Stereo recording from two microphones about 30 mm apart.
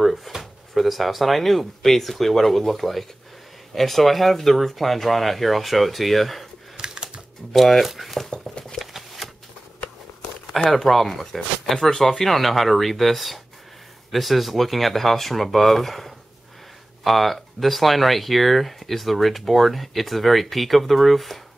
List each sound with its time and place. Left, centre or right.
0.0 s speech: centre
6.8 s typing: right
7.5 s speech: centre
8.3 s patter: left
8.7 s shuffling cards: centre
10.7 s speech: centre
12.3 s speech: centre